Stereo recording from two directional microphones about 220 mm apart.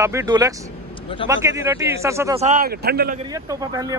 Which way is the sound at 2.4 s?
40° right (ahead or behind).